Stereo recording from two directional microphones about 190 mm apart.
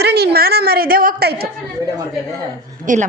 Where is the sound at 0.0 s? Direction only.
60° right (ahead or behind).